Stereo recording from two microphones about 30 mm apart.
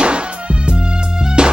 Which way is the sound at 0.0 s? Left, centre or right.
Right.